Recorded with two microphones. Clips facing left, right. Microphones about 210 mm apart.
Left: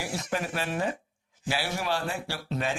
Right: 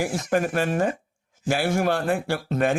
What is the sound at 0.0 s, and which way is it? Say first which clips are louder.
Speech: right 8 dB; 50° right (ahead or behind).